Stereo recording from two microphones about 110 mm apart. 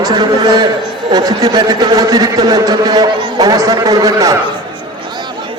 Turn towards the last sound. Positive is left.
turn(degrees=-30)  # may be behind; listen again after turning